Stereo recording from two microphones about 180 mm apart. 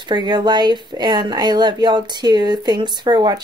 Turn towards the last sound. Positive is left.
turn(degrees=-25)  # may be behind; listen again after turning